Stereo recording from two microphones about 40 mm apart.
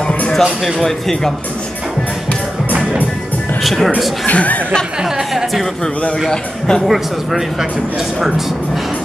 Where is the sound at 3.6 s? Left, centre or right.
Centre.